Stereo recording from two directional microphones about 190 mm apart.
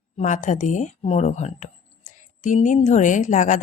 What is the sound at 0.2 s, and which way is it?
Speech, 40° left (ahead or behind).